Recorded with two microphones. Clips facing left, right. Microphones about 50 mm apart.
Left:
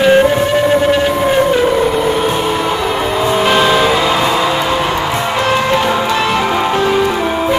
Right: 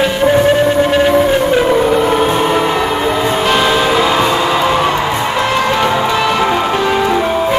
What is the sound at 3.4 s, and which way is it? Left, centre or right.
Music, centre.